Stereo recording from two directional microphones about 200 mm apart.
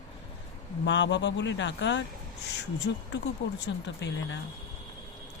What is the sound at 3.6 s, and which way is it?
Speech, 60° left (ahead or behind).